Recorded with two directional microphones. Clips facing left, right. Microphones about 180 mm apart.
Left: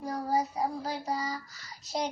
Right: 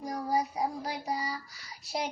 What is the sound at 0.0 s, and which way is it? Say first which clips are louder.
Child singing: left 1 dB; 15° right (ahead or behind).